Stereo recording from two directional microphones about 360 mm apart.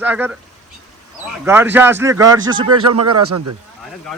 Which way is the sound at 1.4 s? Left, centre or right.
Centre.